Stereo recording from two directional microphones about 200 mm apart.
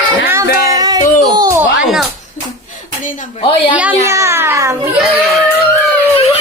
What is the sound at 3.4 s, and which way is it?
Speech, 25° left (ahead or behind).